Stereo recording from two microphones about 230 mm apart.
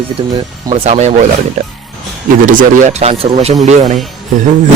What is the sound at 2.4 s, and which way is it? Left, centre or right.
Speech, right.